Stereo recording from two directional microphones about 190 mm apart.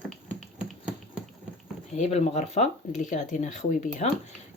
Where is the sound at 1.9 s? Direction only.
35° left (ahead or behind).